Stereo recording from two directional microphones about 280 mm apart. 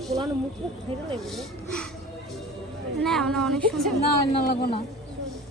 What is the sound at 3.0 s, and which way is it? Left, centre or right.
Speech, centre.